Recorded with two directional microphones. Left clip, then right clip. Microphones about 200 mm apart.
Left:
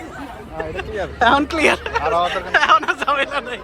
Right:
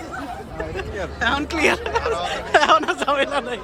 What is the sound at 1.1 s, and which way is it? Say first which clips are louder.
Speech: left 7 dB; centre (ahead or behind).